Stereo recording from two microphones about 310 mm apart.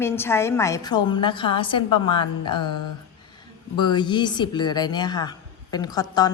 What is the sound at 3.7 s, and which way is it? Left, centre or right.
A woman's voice, centre.